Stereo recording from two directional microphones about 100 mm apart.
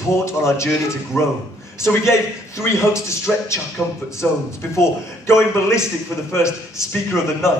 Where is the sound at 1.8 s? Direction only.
30° left (ahead or behind).